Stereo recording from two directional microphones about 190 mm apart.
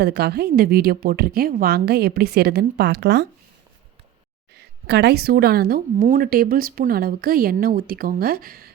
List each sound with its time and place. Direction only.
0.0 s a woman's voice: 55° right (ahead or behind)
4.5 s speech: 60° right (ahead or behind)